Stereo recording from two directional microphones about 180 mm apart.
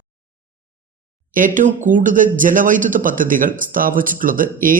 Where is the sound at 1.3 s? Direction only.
45° right (ahead or behind).